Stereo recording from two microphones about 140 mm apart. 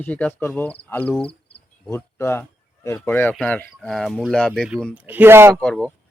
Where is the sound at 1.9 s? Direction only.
15° left (ahead or behind).